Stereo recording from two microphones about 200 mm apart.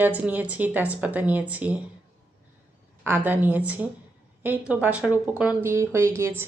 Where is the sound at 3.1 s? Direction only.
10° right (ahead or behind).